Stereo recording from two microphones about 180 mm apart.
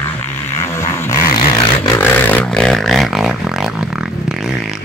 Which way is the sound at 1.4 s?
30° left (ahead or behind).